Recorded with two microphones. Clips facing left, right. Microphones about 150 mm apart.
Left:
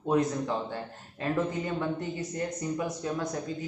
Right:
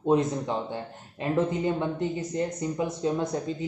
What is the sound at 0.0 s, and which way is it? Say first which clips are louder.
Speech: right 3 dB; 25° right (ahead or behind).